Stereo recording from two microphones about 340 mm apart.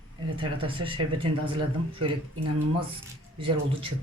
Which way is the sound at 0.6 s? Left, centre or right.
Centre.